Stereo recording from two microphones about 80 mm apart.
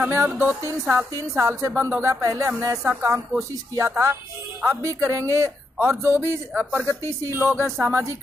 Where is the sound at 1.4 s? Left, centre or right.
Right.